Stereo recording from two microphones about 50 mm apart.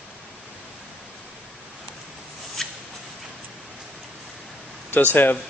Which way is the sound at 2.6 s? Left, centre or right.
Centre.